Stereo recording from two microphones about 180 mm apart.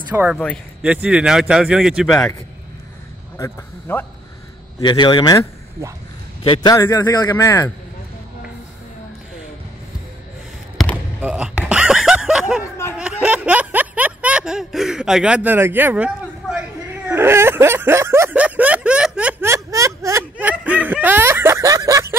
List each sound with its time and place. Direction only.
0.1 s a man's voice: 10° right (ahead or behind)
3.3 s speech: 15° left (ahead or behind)
4.7 s a man's voice: 25° left (ahead or behind)
6.7 s a man's voice: 15° left (ahead or behind)
11.1 s music: 10° right (ahead or behind)
13.2 s a sound: 10° right (ahead or behind)